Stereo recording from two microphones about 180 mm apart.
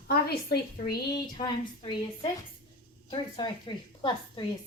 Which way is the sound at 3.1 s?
25° left (ahead or behind).